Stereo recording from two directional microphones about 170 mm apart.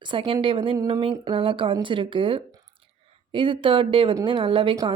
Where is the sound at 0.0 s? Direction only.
30° right (ahead or behind).